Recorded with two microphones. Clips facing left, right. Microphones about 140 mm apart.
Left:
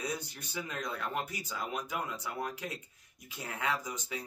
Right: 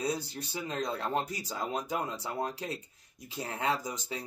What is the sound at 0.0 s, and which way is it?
Speech, 30° right (ahead or behind).